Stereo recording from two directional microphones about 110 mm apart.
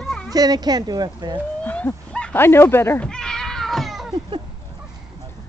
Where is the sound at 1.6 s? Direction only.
15° left (ahead or behind).